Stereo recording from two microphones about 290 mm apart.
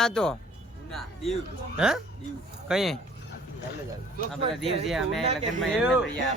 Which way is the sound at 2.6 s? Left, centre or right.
Centre.